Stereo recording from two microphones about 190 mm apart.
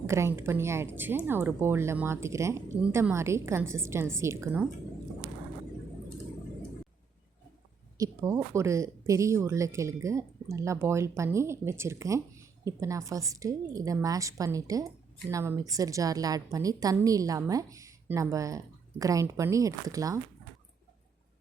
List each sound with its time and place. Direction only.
0.1 s speech: 15° right (ahead or behind)
7.9 s speech: 15° right (ahead or behind)